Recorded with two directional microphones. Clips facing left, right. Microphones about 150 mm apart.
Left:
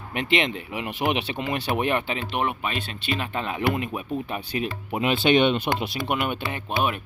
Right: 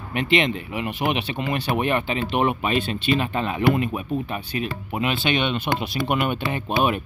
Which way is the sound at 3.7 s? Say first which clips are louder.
Right 4 dB; 10° left (ahead or behind).